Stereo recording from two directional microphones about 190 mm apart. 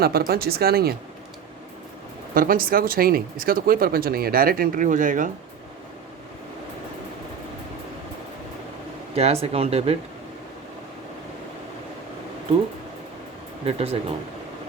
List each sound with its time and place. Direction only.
0.0 s speech: 55° right (ahead or behind)
2.3 s speech: 50° right (ahead or behind)
9.1 s speech: 35° right (ahead or behind)
13.7 s speech: 30° right (ahead or behind)